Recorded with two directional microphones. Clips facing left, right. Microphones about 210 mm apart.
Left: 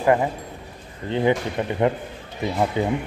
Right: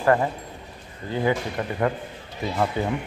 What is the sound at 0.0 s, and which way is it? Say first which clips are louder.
A man's voice: left 1 dB; 15° left (ahead or behind).